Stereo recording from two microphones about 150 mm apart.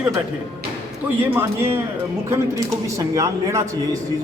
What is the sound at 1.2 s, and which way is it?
A man's voice, 15° right (ahead or behind).